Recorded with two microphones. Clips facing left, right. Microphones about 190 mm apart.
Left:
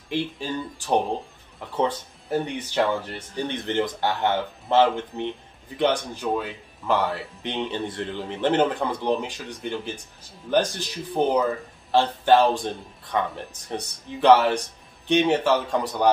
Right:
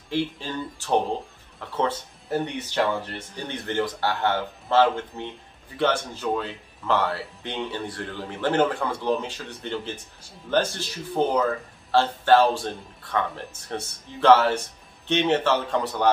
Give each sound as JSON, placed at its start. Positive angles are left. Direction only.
{"t": 0.1, "sound": "speech", "side_deg": 15}